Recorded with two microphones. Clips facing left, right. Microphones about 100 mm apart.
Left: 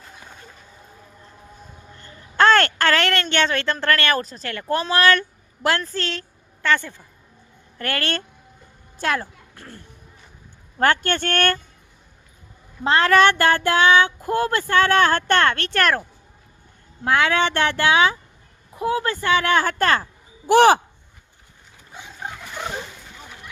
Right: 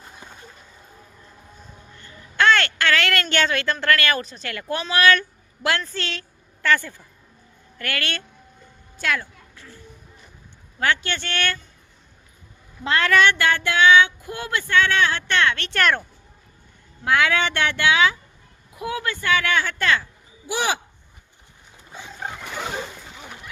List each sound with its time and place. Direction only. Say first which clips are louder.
2.0 s a woman's voice: left 4 dB; 35° left (ahead or behind)
6.6 s a woman's voice: even; 20° left (ahead or behind)
7.8 s speech: left 3 dB; 35° left (ahead or behind)
9.6 s a child's voice: left 4 dB; 55° left (ahead or behind)
10.8 s speech: left 4 dB; 45° left (ahead or behind)
12.8 s speech: left 3 dB; 35° left (ahead or behind); by 20.8 s 50° left (ahead or behind)